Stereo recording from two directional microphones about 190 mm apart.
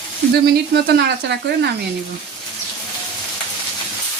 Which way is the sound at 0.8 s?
60° right (ahead or behind).